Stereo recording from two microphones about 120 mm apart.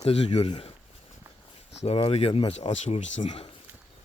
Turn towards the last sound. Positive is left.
turn(degrees=75)  # may be behind; listen again after turning